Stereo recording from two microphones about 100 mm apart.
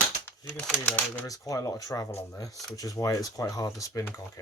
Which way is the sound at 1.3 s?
35° left (ahead or behind).